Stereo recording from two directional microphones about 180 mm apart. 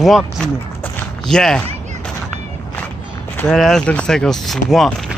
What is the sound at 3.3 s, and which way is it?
Speech, 5° left (ahead or behind).